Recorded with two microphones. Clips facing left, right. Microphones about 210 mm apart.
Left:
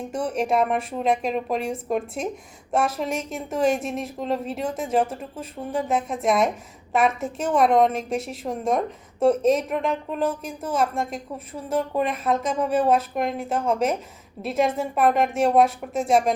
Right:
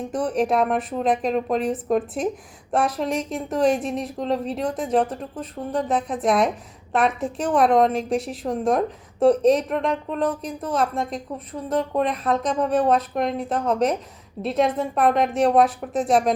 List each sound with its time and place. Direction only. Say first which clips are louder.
0.1 s a woman's voice: right 2 dB; centre (ahead or behind)